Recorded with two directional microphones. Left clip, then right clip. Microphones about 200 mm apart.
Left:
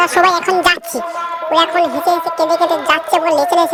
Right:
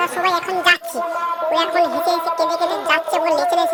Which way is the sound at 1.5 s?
20° left (ahead or behind).